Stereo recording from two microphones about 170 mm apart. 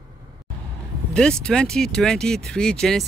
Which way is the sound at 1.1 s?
5° left (ahead or behind).